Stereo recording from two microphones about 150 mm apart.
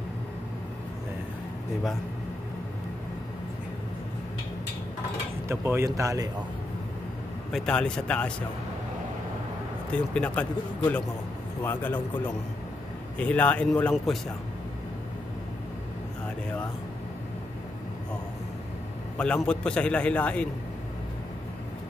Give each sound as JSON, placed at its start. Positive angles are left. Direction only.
{"t": 5.5, "sound": "speech", "side_deg": -15}
{"t": 7.5, "sound": "speech", "side_deg": 5}
{"t": 9.8, "sound": "a man's voice", "side_deg": 10}
{"t": 11.6, "sound": "a man's voice", "side_deg": 15}
{"t": 13.2, "sound": "a man's voice", "side_deg": 10}
{"t": 19.1, "sound": "a man's voice", "side_deg": 5}